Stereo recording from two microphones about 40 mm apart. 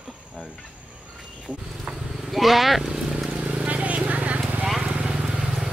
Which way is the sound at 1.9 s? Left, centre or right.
Centre.